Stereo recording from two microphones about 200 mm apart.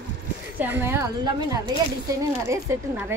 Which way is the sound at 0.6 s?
10° right (ahead or behind).